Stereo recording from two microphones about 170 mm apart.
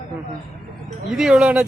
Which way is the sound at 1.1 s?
5° right (ahead or behind).